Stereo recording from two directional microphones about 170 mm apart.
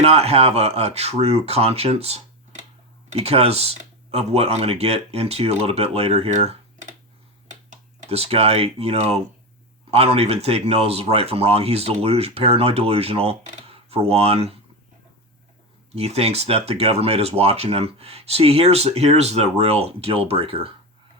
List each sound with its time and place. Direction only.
0.0 s speech: 40° right (ahead or behind)
16.0 s speech: 35° right (ahead or behind)